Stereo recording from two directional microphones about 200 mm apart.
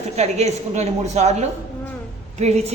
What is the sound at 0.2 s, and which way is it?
A woman's voice, 35° right (ahead or behind).